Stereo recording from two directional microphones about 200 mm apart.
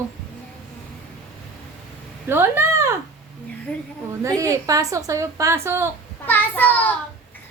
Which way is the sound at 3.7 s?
5° left (ahead or behind).